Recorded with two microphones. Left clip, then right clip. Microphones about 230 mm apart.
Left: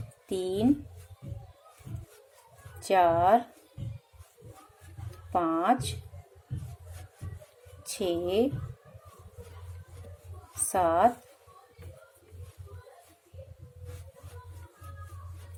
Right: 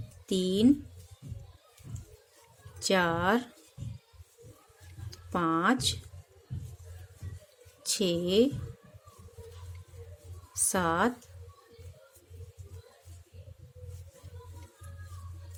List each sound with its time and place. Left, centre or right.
0.3 s speech: right
2.8 s speech: right
5.3 s speech: right
7.9 s speech: right
10.7 s speech: right